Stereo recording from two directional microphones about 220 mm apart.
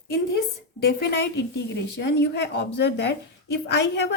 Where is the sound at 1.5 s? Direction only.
50° left (ahead or behind).